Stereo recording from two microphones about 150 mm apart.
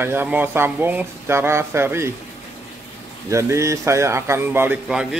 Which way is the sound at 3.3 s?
20° right (ahead or behind).